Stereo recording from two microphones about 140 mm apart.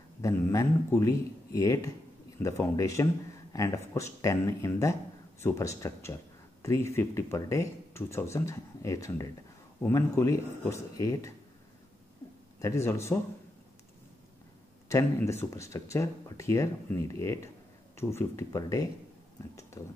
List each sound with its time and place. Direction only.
0.2 s speech: 20° left (ahead or behind)
12.5 s speech: 20° left (ahead or behind)
14.9 s speech: 20° left (ahead or behind)